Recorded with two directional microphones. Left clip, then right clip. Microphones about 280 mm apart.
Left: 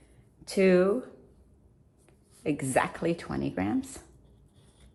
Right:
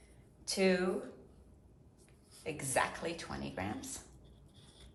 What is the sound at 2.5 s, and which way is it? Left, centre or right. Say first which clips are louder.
Speech: left 7 dB; left.